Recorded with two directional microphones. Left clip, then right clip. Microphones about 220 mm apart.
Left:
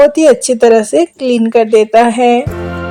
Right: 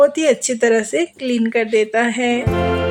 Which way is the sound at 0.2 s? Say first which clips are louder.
Left 8 dB; 20° left (ahead or behind).